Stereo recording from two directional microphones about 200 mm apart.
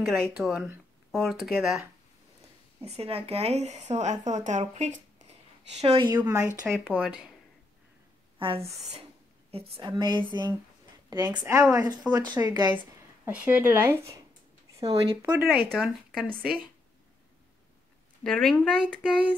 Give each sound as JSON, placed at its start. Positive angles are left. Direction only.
{"t": 0.0, "sound": "speech", "side_deg": 0}
{"t": 2.8, "sound": "speech", "side_deg": -30}
{"t": 6.0, "sound": "a woman's voice", "side_deg": -15}
{"t": 9.8, "sound": "a woman's voice", "side_deg": -20}
{"t": 12.7, "sound": "speech", "side_deg": -10}
{"t": 15.7, "sound": "speech", "side_deg": 0}
{"t": 18.2, "sound": "speech", "side_deg": 0}